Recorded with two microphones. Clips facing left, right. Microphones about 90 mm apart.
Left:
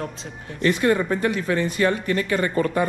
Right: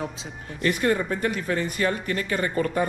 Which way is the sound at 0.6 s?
40° left (ahead or behind).